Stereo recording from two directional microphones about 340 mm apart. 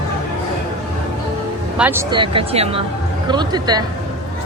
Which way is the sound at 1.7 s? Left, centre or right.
Centre.